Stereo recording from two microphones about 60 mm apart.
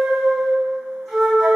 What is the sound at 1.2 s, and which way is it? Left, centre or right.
Flute, centre.